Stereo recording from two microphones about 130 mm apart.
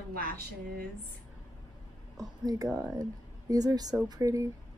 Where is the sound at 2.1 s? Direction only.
30° right (ahead or behind).